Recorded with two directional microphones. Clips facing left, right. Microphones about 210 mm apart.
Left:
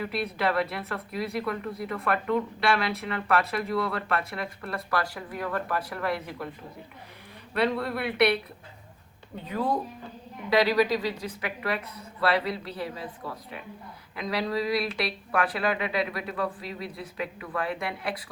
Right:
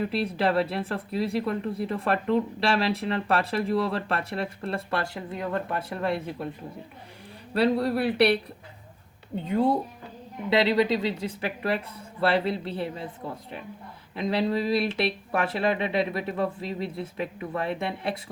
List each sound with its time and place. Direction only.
0.0 s speech: 30° right (ahead or behind)
7.5 s speech: 30° right (ahead or behind)
9.5 s speech: 25° right (ahead or behind)